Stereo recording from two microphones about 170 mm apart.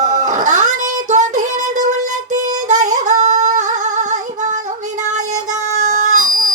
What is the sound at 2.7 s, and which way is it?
Singing, 45° right (ahead or behind).